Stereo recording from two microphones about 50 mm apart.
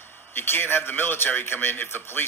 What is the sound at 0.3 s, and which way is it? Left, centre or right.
A man's voice, left.